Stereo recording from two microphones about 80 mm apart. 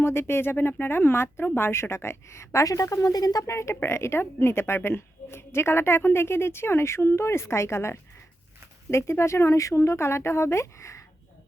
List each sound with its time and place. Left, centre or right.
0.0 s a woman's voice: left
3.4 s a woman's voice: left